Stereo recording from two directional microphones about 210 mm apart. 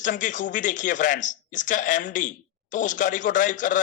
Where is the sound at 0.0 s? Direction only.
40° left (ahead or behind).